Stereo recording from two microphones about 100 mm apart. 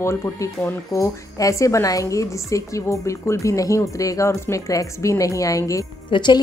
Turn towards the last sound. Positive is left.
turn(degrees=50)  # may be behind; listen again after turning